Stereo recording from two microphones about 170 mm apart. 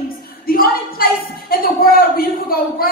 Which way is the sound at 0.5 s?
60° left (ahead or behind).